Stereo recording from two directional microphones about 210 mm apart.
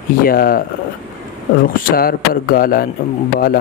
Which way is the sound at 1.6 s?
45° left (ahead or behind).